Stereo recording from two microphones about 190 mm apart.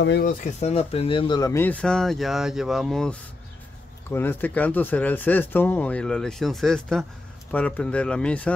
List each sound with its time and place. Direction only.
0.0 s speech: 65° left (ahead or behind)
0.3 s speech: 40° left (ahead or behind); by 8.5 s 5° left (ahead or behind)